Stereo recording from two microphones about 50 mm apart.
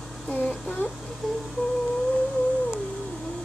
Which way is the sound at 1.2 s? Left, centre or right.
Centre.